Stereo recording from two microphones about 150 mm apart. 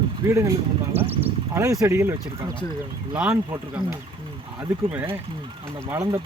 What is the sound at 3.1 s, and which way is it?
Speech, 5° right (ahead or behind).